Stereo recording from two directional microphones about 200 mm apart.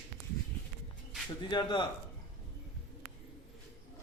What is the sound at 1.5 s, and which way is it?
Speech, 20° left (ahead or behind).